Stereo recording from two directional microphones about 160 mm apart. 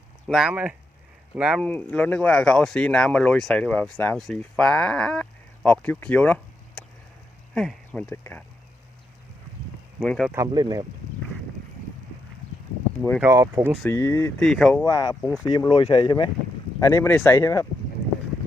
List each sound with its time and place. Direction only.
0.3 s speech: 5° right (ahead or behind)
1.6 s speech: 10° left (ahead or behind)
8.1 s speech: 15° left (ahead or behind)
10.0 s speech: 5° left (ahead or behind)
10.3 s speech: 25° right (ahead or behind)
13.2 s speech: 15° right (ahead or behind)
13.8 s speech: 20° left (ahead or behind)
14.3 s speech: 5° left (ahead or behind)
14.8 s speech: 20° left (ahead or behind)
16.8 s speech: 20° left (ahead or behind)